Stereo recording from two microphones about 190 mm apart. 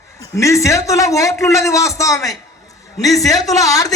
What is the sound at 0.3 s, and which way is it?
A man's voice, 15° left (ahead or behind).